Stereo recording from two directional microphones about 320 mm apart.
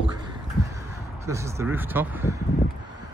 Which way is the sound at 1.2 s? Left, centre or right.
Centre.